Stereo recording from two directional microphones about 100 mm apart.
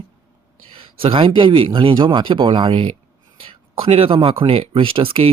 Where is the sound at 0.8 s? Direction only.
60° right (ahead or behind).